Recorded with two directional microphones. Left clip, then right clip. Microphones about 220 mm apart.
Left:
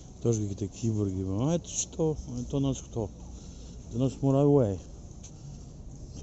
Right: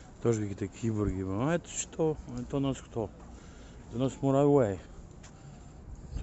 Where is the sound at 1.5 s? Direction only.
30° right (ahead or behind).